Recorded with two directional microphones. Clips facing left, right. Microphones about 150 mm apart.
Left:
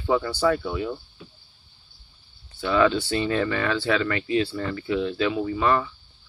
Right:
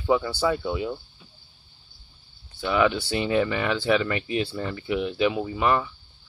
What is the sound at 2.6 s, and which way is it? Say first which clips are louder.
Speech: left 2 dB; 15° right (ahead or behind).